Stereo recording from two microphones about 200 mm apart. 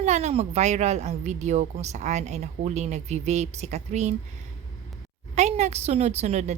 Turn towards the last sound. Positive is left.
turn(degrees=-35)  # may be behind; listen again after turning